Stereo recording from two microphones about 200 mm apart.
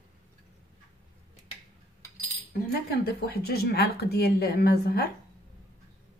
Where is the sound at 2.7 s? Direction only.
50° left (ahead or behind).